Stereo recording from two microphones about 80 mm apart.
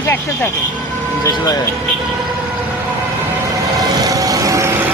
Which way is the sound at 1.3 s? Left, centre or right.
Left.